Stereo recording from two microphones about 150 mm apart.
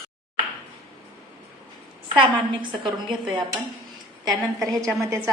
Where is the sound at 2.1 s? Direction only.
30° right (ahead or behind).